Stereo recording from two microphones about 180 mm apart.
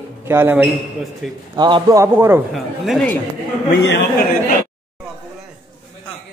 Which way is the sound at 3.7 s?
55° left (ahead or behind).